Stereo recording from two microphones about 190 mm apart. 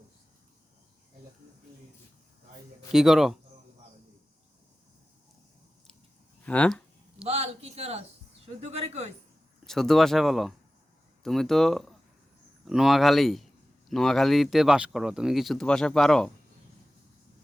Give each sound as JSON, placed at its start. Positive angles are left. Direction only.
{"t": 2.9, "sound": "speech", "side_deg": 0}
{"t": 6.4, "sound": "a sound", "side_deg": 5}
{"t": 7.3, "sound": "speech", "side_deg": -35}
{"t": 9.6, "sound": "speech", "side_deg": 0}